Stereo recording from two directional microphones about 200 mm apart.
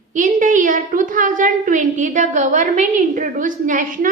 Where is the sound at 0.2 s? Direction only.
40° right (ahead or behind).